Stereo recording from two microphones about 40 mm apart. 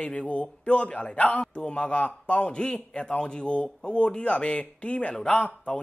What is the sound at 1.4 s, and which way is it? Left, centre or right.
A man's voice, left.